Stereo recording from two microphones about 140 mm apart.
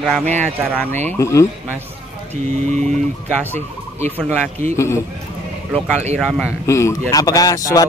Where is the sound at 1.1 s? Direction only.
20° left (ahead or behind).